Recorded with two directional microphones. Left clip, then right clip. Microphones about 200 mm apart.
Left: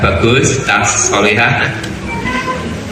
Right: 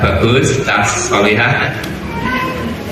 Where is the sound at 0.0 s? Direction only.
30° left (ahead or behind).